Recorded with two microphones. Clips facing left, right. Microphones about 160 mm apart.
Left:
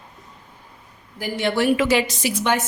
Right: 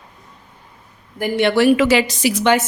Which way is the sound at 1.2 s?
70° right (ahead or behind).